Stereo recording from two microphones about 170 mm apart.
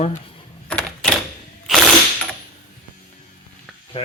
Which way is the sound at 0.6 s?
5° left (ahead or behind).